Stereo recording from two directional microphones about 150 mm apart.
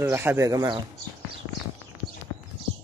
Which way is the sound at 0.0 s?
15° right (ahead or behind).